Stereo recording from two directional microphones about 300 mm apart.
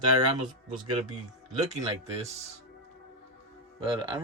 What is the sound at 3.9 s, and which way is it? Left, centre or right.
Speech, centre.